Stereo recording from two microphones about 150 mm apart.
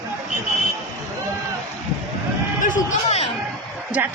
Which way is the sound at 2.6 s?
60° left (ahead or behind).